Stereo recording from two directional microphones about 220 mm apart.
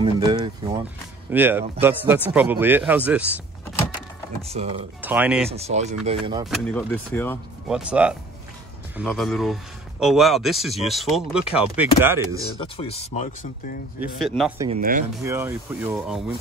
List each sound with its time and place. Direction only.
0.0 s a sound: 20° right (ahead or behind)
1.3 s speech: 10° right (ahead or behind)
4.4 s speech: 30° right (ahead or behind)
5.0 s speech: 5° right (ahead or behind)
5.5 s speech: 30° right (ahead or behind)
6.4 s speech: centre (ahead or behind)
7.6 s speech: 5° right (ahead or behind)
12.7 s speech: 25° left (ahead or behind)
14.2 s speech: centre (ahead or behind)
14.8 s speech: 40° right (ahead or behind)
15.2 s speech: 10° right (ahead or behind)